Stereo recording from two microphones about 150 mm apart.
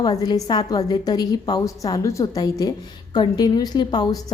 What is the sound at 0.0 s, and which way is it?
A woman's voice, 25° left (ahead or behind).